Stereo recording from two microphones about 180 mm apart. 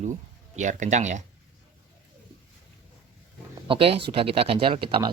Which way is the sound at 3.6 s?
30° right (ahead or behind).